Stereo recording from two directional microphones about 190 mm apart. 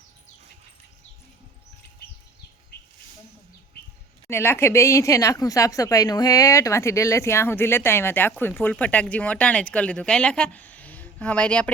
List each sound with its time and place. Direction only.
2.7 s bird: 55° left (ahead or behind)
4.3 s speech: 10° left (ahead or behind)